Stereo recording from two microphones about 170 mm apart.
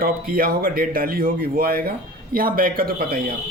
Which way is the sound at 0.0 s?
60° right (ahead or behind).